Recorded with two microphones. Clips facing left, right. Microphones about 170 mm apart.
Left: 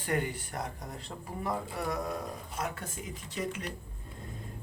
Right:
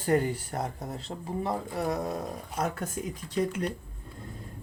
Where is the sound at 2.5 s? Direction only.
40° right (ahead or behind).